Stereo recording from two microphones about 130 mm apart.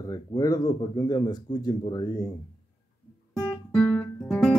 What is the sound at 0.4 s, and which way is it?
Speech, 25° left (ahead or behind).